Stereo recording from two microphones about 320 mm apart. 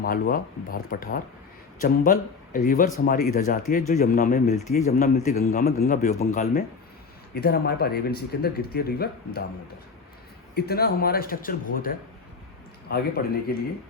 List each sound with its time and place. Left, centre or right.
0.0 s a man's voice: left
10.5 s a man's voice: left